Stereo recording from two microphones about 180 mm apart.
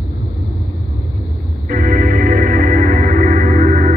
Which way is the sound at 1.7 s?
50° right (ahead or behind).